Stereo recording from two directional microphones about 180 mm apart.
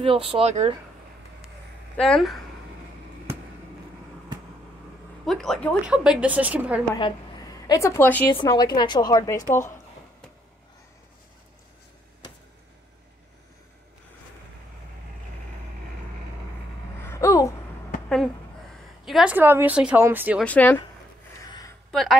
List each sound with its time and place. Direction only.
0.0 s speech: 30° right (ahead or behind)
2.0 s a woman's voice: centre (ahead or behind)
5.2 s a woman's voice: centre (ahead or behind)
5.9 s speech: 5° right (ahead or behind)
7.6 s a woman's voice: 20° left (ahead or behind)
8.4 s a woman's voice: 25° left (ahead or behind)
17.1 s a sound: 15° left (ahead or behind)
19.0 s speech: 5° right (ahead or behind)
20.4 s a woman's voice: 10° left (ahead or behind)
21.4 s a sound: 20° left (ahead or behind)
21.9 s a woman's voice: centre (ahead or behind)